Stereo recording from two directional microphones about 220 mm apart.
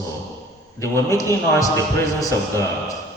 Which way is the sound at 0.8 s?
10° left (ahead or behind).